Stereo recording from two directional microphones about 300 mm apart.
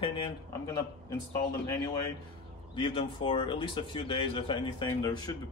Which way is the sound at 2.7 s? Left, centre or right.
Centre.